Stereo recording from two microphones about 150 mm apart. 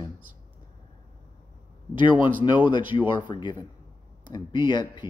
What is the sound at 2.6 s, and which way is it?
Speech, 30° left (ahead or behind).